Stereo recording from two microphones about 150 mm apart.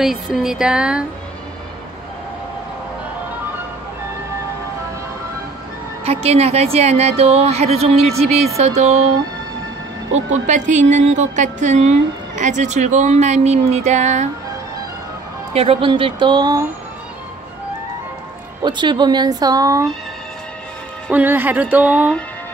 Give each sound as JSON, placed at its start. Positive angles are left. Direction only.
{"t": 0.0, "sound": "a sound", "side_deg": 0}
{"t": 6.0, "sound": "a woman's voice", "side_deg": -45}
{"t": 10.3, "sound": "a woman's voice", "side_deg": -50}
{"t": 15.5, "sound": "speech", "side_deg": -40}
{"t": 18.6, "sound": "speech", "side_deg": -30}
{"t": 21.1, "sound": "speech", "side_deg": -15}